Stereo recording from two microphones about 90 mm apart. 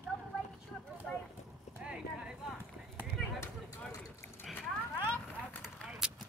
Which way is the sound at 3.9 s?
30° left (ahead or behind).